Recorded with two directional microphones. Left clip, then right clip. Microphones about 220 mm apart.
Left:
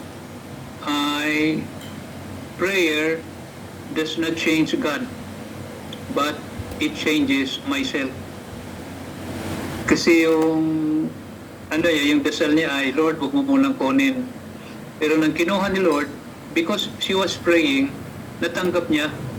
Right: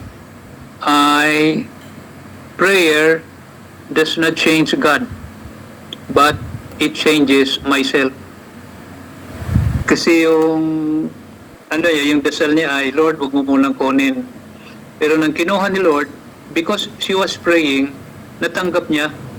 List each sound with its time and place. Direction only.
0.9 s a sound: 45° right (ahead or behind)
2.6 s a man's voice: 45° right (ahead or behind)
6.7 s a man's voice: 45° right (ahead or behind)
9.8 s a man's voice: 40° right (ahead or behind)
11.7 s a man's voice: 40° right (ahead or behind)